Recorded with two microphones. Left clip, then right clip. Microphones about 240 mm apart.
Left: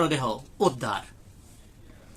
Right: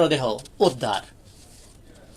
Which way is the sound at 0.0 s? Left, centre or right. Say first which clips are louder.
Right 5 dB; centre.